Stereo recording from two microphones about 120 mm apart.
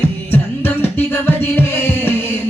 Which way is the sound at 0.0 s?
15° left (ahead or behind).